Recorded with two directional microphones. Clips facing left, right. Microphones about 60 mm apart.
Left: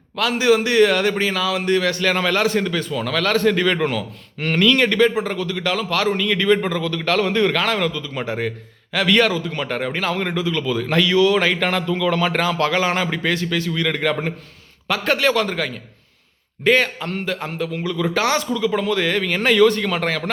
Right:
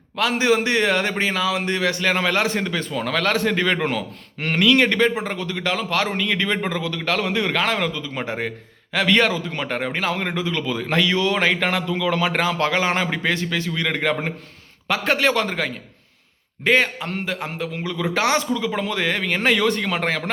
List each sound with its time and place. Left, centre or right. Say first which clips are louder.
0.2 s a man's voice: left 2 dB; right
6.9 s a man's voice: left 5 dB; centre
7.5 s a man's voice: left 1 dB; right